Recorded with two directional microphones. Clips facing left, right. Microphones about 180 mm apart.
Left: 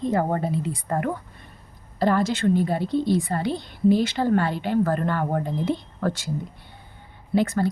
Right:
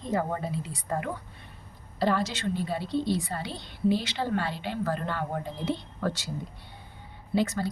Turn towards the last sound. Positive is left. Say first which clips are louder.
# left 5 dB
turn(degrees=55)  # may be behind; listen again after turning